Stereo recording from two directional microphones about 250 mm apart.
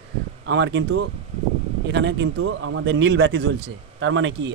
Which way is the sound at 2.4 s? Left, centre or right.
Right.